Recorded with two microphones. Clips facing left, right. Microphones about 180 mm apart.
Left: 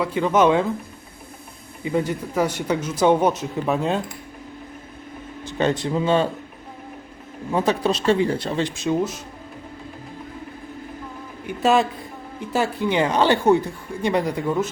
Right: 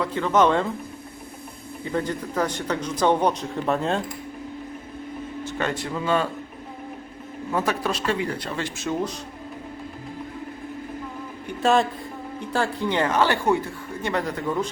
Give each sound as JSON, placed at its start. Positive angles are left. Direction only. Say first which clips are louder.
{"t": 0.0, "sound": "speech", "louder": "left 2 dB", "side_deg": 10}
{"t": 1.8, "sound": "speech", "louder": "left 3 dB", "side_deg": 10}
{"t": 5.5, "sound": "speech", "louder": "left 7 dB", "side_deg": 20}
{"t": 7.5, "sound": "speech", "louder": "left 4 dB", "side_deg": 20}
{"t": 11.4, "sound": "a man's voice", "louder": "left 2 dB", "side_deg": 5}